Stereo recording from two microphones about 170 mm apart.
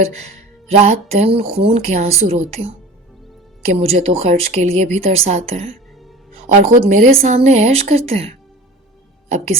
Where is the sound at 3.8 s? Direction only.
40° right (ahead or behind).